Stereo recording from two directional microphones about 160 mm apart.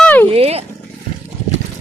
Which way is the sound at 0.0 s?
10° left (ahead or behind).